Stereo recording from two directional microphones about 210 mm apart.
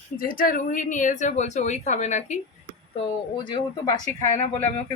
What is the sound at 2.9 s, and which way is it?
Speech, 20° left (ahead or behind).